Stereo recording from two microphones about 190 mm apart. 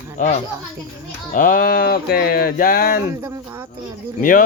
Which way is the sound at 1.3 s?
50° left (ahead or behind).